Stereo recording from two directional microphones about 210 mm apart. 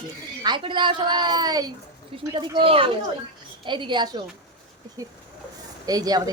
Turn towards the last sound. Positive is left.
turn(degrees=-20)  # may be behind; listen again after turning